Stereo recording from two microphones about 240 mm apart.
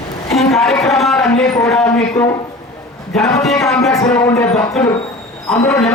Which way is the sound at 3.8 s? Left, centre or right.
Centre.